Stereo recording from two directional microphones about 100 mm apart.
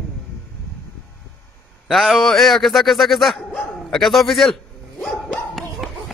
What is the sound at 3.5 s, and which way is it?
Dog, 5° left (ahead or behind).